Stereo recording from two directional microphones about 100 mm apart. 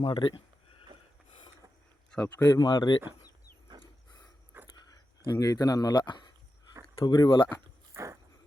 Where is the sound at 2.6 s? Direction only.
45° left (ahead or behind).